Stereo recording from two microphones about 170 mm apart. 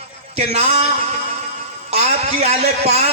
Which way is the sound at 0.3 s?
35° right (ahead or behind).